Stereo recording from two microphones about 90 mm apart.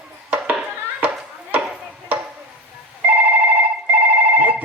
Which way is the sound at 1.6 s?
15° right (ahead or behind).